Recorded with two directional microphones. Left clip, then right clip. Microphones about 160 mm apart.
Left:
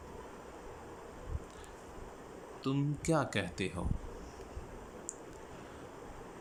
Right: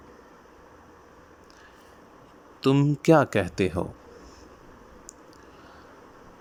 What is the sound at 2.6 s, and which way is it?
Speech, 75° right (ahead or behind).